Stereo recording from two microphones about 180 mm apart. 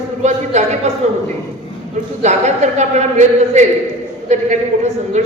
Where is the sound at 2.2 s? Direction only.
40° right (ahead or behind).